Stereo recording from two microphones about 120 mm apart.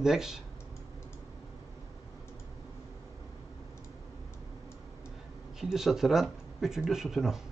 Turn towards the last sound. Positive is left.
turn(degrees=-5)  # may be behind; listen again after turning